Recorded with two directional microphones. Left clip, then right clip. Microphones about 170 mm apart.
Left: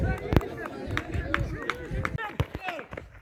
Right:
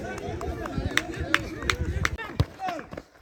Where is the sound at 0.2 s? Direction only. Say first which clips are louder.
Left 3 dB; 50° left (ahead or behind).